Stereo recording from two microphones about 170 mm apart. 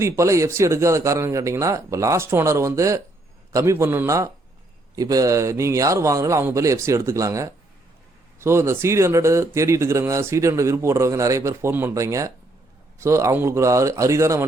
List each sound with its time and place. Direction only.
0.0 s speech: 15° right (ahead or behind)